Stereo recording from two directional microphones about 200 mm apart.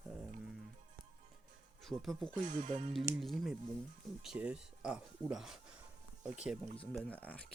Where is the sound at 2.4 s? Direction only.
40° right (ahead or behind).